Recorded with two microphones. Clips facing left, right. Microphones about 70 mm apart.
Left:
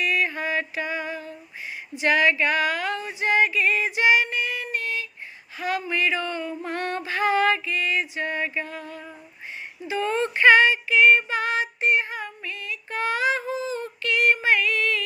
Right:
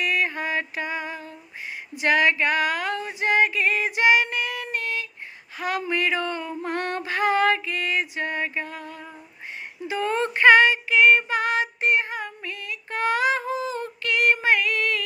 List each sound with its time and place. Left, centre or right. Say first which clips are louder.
0.0 s music: even; right
2.0 s speech: even; right
3.2 s female singing: even; right
5.5 s a sound: even; right
11.3 s child singing: right 1 dB; right